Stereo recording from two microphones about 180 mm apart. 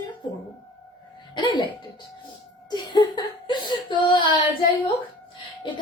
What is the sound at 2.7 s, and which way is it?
Speech, 25° left (ahead or behind).